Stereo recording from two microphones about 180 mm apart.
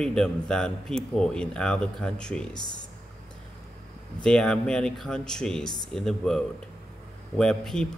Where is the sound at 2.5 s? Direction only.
25° left (ahead or behind).